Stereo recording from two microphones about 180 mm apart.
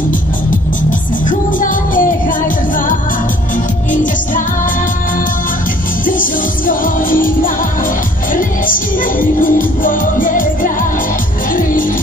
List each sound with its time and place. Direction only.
1.6 s music: 50° left (ahead or behind)
6.0 s music: 50° left (ahead or behind)
9.2 s music: 50° left (ahead or behind)